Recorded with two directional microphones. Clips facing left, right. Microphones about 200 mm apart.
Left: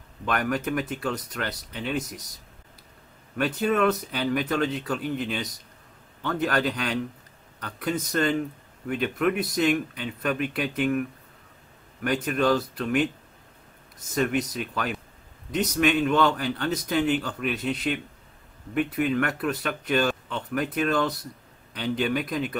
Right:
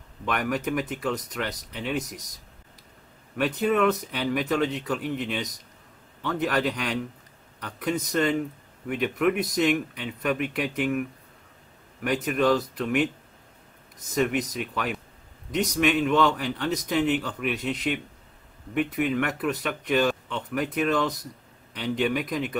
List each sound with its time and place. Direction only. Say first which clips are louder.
0.2 s speech: left 1 dB; centre (ahead or behind)
3.3 s speech: even; 5° right (ahead or behind)
14.1 s speech: even; 5° right (ahead or behind)